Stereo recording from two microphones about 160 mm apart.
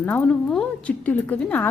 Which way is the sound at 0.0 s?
10° left (ahead or behind).